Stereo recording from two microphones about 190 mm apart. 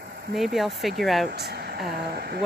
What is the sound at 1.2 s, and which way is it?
Speech, 60° right (ahead or behind).